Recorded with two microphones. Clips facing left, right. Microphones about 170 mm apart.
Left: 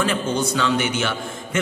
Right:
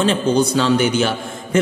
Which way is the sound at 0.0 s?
30° right (ahead or behind).